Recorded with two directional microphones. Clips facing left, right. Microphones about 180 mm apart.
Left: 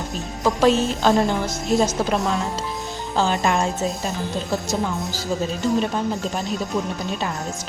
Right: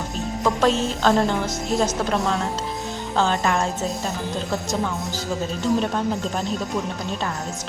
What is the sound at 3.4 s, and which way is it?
Speech, 20° left (ahead or behind).